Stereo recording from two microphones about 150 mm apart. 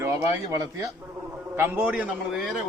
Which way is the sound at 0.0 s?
20° right (ahead or behind).